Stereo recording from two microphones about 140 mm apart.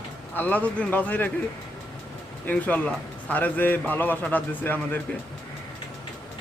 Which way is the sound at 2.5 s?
10° left (ahead or behind).